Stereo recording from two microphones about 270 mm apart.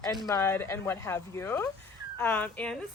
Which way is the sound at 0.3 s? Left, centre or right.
Centre.